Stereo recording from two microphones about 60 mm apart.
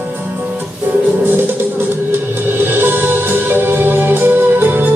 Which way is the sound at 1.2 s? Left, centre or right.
Right.